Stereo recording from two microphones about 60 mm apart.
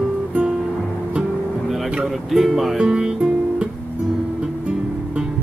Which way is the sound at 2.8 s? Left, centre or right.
Centre.